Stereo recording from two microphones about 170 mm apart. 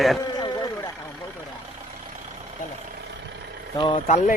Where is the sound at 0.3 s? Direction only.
25° left (ahead or behind).